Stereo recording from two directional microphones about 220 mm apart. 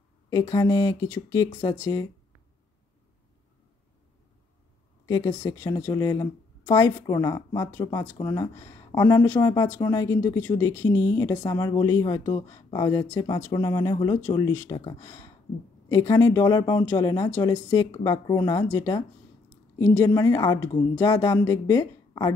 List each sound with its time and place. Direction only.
0.3 s speech: 15° left (ahead or behind)
5.0 s speech: 15° left (ahead or behind)